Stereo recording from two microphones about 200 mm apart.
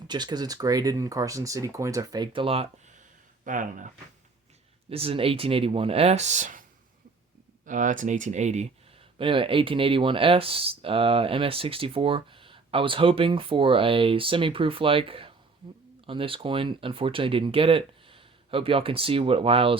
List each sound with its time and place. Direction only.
0.1 s speech: 20° right (ahead or behind)
3.4 s speech: 40° right (ahead or behind)
4.9 s speech: 30° right (ahead or behind)